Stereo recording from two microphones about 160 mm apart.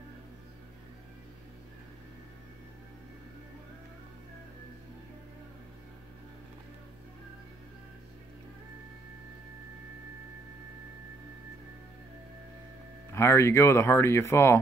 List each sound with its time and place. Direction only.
13.1 s speech: 15° left (ahead or behind)